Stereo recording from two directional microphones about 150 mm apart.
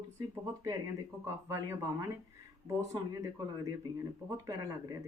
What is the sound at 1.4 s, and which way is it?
Speech, 20° right (ahead or behind).